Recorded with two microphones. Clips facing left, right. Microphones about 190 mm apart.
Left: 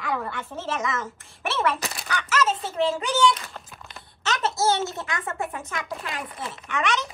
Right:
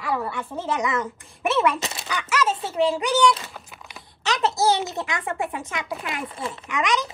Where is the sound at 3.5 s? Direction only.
5° right (ahead or behind).